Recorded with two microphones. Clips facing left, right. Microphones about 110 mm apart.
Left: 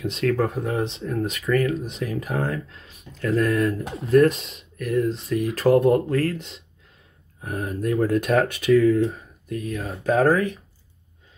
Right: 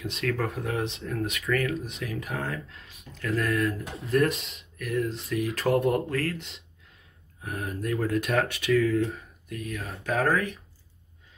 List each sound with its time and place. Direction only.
0.0 s speech: 30° left (ahead or behind)